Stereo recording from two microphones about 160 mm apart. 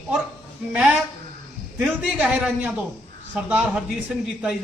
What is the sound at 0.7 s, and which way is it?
A man's voice, 5° right (ahead or behind).